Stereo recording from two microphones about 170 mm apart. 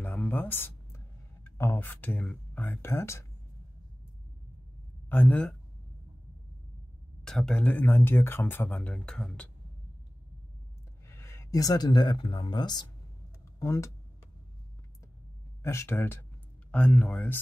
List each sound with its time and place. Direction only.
0.0 s a sound: 10° left (ahead or behind)
5.1 s speech: 10° left (ahead or behind)
7.2 s speech: 5° left (ahead or behind)
11.1 s speech: 15° left (ahead or behind)
15.6 s speech: 15° left (ahead or behind)